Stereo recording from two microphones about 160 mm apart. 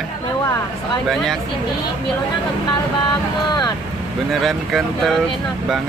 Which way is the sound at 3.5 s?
25° left (ahead or behind).